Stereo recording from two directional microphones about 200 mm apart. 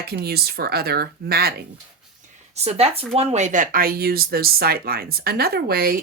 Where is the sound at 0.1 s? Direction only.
50° right (ahead or behind).